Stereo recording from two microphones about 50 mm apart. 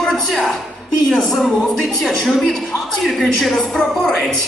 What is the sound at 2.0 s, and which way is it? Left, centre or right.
A man's voice, centre.